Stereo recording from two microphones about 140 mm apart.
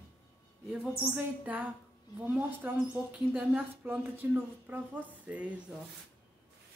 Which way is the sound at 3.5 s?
10° right (ahead or behind).